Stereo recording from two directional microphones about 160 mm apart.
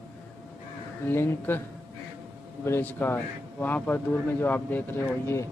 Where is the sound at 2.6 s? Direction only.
15° left (ahead or behind).